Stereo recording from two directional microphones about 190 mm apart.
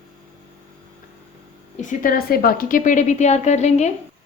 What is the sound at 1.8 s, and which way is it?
A woman's voice, 45° left (ahead or behind).